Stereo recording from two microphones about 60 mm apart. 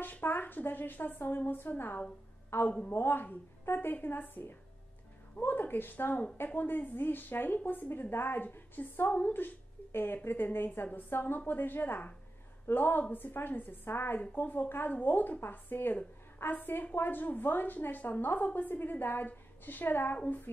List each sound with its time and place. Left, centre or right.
0.0 s a woman's voice: left